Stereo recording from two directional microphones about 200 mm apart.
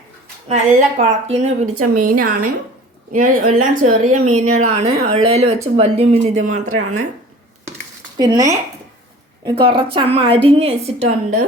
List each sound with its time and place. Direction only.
0.4 s speech: 35° right (ahead or behind)
2.0 s a woman's voice: 45° right (ahead or behind)
4.1 s a woman's voice: 90° right
4.4 s speech: 35° right (ahead or behind)
6.7 s a woman's voice: 90° right
8.2 s a woman's voice: 20° right (ahead or behind); by 11.4 s 35° right (ahead or behind)